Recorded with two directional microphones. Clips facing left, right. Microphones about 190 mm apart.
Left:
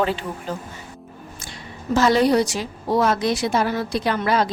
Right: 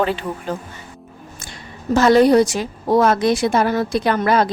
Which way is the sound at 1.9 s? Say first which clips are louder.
Right 5 dB; 50° right (ahead or behind).